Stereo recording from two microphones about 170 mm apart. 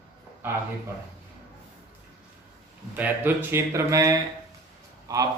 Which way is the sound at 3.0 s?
10° right (ahead or behind).